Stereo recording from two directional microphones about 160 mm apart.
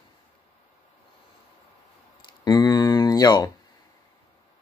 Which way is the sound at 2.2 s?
25° left (ahead or behind).